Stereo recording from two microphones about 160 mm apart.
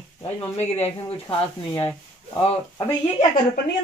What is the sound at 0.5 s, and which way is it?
Speech, 40° left (ahead or behind).